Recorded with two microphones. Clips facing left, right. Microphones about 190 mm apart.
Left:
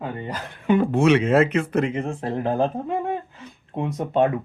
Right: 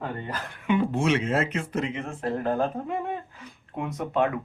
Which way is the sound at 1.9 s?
30° left (ahead or behind).